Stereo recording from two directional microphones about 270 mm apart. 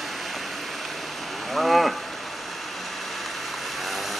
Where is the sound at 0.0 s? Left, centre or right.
Centre.